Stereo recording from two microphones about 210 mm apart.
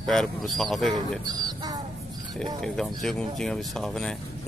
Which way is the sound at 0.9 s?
20° right (ahead or behind).